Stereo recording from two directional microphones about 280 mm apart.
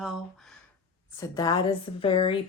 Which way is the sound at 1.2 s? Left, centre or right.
Centre.